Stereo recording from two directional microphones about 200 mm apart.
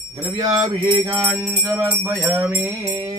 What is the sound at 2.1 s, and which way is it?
Music, 10° right (ahead or behind).